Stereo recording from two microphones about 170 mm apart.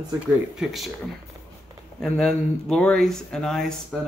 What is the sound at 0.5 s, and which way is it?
Speech, centre (ahead or behind).